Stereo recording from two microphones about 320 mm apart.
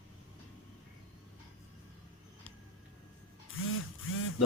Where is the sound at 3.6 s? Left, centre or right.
Left.